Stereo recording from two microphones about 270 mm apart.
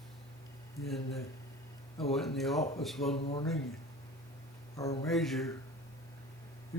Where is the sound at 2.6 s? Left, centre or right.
Left.